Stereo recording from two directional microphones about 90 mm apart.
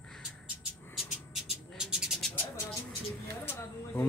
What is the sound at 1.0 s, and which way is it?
Cat, 5° right (ahead or behind).